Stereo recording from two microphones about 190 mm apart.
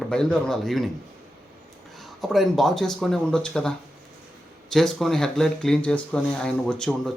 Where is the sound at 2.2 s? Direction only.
Centre (ahead or behind).